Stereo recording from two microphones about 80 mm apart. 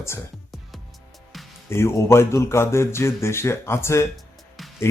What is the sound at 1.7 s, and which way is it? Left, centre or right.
Speech, left.